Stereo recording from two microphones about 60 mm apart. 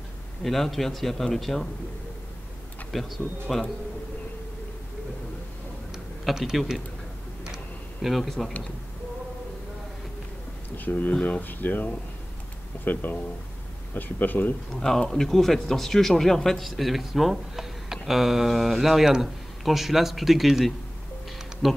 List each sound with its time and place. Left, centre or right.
0.4 s speech: centre
2.9 s speech: centre
6.2 s speech: centre
7.4 s a sound: centre
8.1 s speech: centre
10.9 s speech: left
14.7 s speech: centre